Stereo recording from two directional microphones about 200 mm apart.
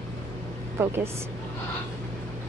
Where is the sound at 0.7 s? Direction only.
10° right (ahead or behind).